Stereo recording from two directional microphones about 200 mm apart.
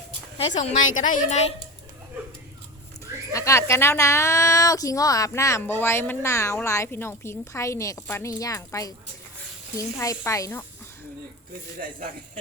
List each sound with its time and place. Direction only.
0.3 s speech: 40° left (ahead or behind)
3.3 s a woman's voice: 15° left (ahead or behind)
11.8 s speech: 40° right (ahead or behind)